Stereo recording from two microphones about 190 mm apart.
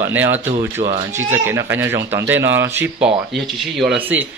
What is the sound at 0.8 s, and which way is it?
Speech, 30° right (ahead or behind).